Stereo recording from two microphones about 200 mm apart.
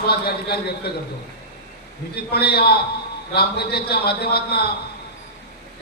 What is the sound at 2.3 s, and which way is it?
A man's voice, 55° left (ahead or behind).